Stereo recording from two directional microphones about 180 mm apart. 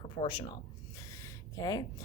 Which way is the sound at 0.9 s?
20° left (ahead or behind).